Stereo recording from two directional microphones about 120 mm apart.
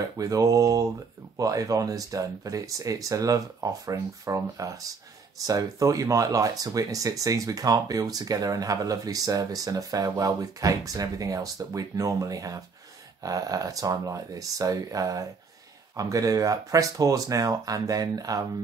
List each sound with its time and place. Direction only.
0.0 s speech: 30° right (ahead or behind)